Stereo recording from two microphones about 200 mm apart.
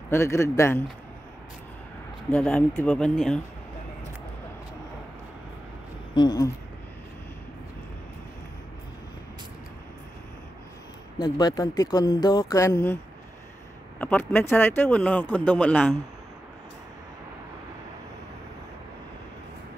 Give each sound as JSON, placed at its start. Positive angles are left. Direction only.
{"t": 0.1, "sound": "a man's voice", "side_deg": 15}
{"t": 2.3, "sound": "speech", "side_deg": 5}
{"t": 6.1, "sound": "speech", "side_deg": 20}
{"t": 11.1, "sound": "a man's voice", "side_deg": 20}